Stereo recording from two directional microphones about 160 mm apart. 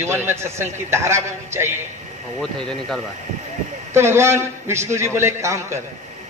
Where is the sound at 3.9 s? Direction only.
15° right (ahead or behind).